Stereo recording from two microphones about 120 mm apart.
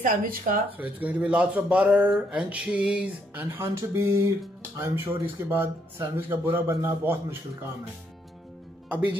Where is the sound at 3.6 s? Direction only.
25° right (ahead or behind).